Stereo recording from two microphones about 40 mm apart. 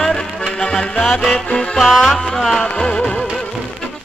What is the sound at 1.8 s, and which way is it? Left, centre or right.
Music, centre.